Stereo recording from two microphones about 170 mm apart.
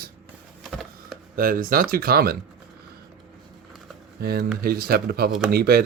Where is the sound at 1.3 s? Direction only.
55° right (ahead or behind).